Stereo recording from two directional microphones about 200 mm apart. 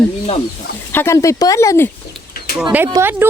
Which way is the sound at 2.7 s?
10° right (ahead or behind).